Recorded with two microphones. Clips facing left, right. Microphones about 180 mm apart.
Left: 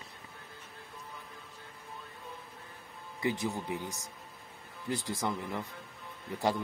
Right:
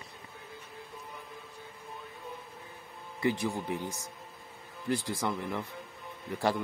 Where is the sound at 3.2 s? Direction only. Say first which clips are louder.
Right 3 dB; 20° left (ahead or behind).